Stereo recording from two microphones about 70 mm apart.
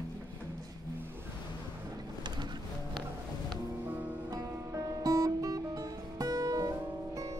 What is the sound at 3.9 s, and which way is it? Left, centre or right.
Music, right.